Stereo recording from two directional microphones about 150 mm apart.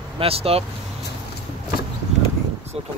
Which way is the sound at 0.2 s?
40° right (ahead or behind).